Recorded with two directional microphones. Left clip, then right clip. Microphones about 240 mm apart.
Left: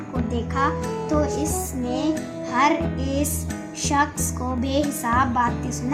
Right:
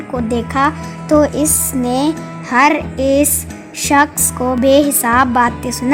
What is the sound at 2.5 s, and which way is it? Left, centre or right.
A child's voice, right.